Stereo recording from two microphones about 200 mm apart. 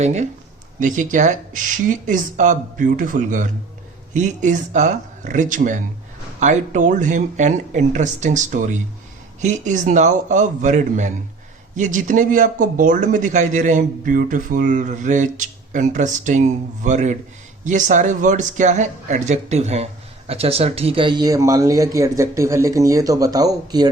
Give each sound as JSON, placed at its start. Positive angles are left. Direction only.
{"t": 0.0, "sound": "speech", "side_deg": -35}